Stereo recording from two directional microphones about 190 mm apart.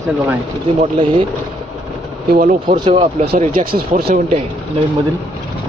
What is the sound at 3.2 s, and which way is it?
Speech, 45° right (ahead or behind).